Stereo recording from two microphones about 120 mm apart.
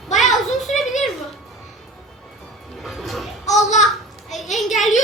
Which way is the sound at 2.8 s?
Centre (ahead or behind).